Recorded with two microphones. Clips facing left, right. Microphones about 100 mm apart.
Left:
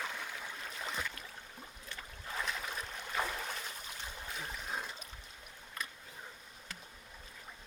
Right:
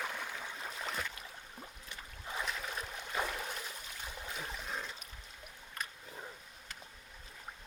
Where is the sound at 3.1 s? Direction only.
Centre (ahead or behind).